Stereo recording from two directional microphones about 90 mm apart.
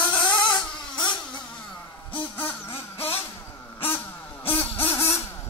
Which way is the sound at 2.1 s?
25° left (ahead or behind).